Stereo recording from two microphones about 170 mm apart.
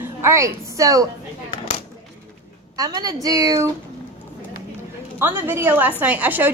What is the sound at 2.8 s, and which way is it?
Speech, 25° right (ahead or behind).